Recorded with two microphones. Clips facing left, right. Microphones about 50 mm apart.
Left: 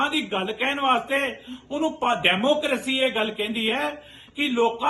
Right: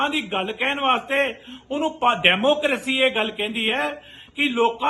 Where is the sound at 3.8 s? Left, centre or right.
Right.